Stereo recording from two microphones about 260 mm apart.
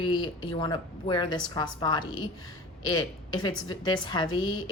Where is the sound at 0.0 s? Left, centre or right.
Centre.